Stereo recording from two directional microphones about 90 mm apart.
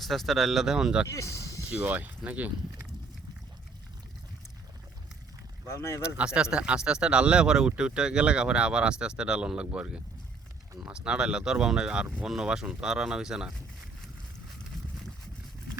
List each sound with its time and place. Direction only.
0.0 s speech: centre (ahead or behind)
1.1 s speech: 35° left (ahead or behind)
1.7 s speech: 15° right (ahead or behind)
5.6 s speech: 30° left (ahead or behind)
6.1 s speech: 10° right (ahead or behind)